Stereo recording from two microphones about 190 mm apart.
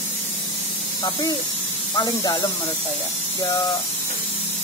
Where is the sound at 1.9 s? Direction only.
20° left (ahead or behind).